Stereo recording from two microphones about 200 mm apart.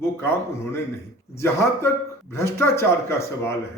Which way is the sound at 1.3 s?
15° left (ahead or behind).